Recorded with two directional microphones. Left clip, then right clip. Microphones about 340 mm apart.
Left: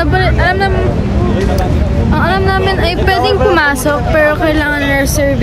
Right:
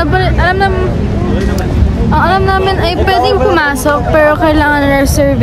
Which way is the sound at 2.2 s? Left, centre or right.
Centre.